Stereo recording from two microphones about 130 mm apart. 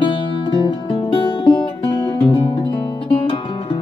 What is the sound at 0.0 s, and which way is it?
Music, 40° left (ahead or behind).